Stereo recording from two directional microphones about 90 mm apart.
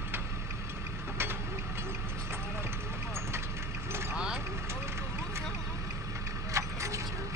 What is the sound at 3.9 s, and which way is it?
Vehicle, 30° right (ahead or behind).